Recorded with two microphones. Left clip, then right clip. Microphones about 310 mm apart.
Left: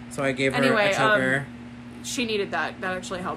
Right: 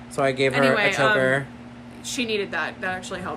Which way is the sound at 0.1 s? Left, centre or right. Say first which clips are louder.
Right 4 dB; centre.